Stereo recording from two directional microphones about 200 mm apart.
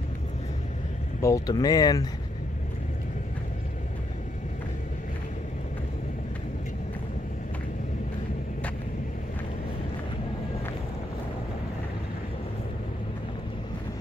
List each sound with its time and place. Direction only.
1.2 s speech: 15° left (ahead or behind)